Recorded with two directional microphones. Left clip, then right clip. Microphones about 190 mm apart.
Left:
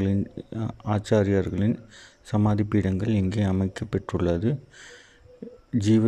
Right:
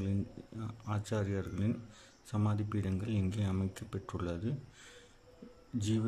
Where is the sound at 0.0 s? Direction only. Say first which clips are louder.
Left 12 dB; 30° left (ahead or behind).